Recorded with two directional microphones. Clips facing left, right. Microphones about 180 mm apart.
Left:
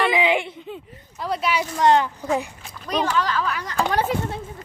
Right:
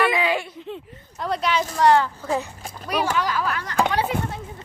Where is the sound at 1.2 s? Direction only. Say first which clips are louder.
Right 1 dB; centre (ahead or behind).